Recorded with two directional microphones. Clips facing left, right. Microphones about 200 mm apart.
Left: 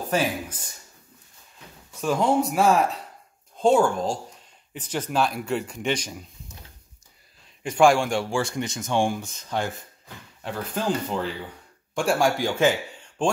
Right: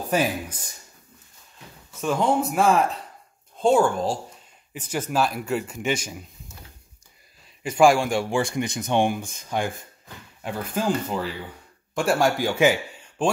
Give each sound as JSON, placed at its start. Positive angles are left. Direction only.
{"t": 0.1, "sound": "speech", "side_deg": -15}
{"t": 2.0, "sound": "speech", "side_deg": 0}
{"t": 7.6, "sound": "speech", "side_deg": -5}